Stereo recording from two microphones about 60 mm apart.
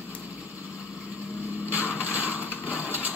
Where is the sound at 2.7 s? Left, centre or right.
Left.